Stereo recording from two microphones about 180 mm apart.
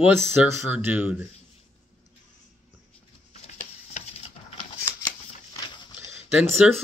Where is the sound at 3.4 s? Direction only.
40° left (ahead or behind).